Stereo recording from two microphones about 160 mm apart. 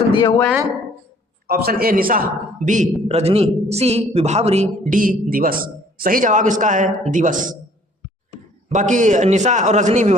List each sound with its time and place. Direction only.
0.1 s speech: 30° left (ahead or behind)
1.5 s a man's voice: 75° right (ahead or behind)
2.6 s a man's voice: 50° right (ahead or behind)
3.1 s a man's voice: 40° right (ahead or behind); by 7.5 s 55° right (ahead or behind)
8.7 s a man's voice: 50° right (ahead or behind)